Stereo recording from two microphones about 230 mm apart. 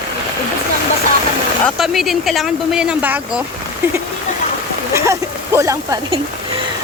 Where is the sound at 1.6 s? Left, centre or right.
Centre.